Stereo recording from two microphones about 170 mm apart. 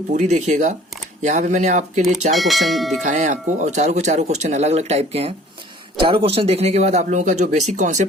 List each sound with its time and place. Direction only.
0.1 s speech: 45° right (ahead or behind)
2.3 s speech: centre (ahead or behind)
3.0 s speech: 45° right (ahead or behind)